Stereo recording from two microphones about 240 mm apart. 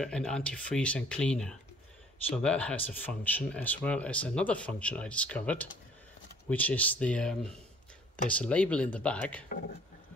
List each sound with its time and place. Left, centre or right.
0.0 s speech: centre